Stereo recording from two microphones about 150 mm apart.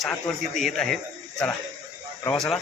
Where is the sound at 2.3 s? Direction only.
5° left (ahead or behind).